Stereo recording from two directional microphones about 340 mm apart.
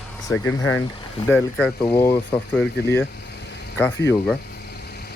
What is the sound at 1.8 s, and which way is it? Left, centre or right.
Speech, centre.